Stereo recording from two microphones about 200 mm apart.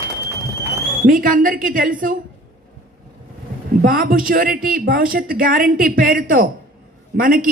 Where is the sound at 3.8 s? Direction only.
45° right (ahead or behind).